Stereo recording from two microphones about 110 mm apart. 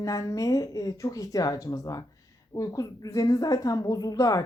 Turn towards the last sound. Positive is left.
turn(degrees=35)  # may be behind; listen again after turning